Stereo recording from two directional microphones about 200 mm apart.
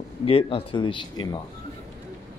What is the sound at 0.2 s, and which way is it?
Speech, 30° left (ahead or behind).